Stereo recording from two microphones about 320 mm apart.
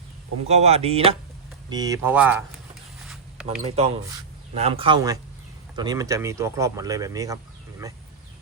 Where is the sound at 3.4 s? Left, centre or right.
Centre.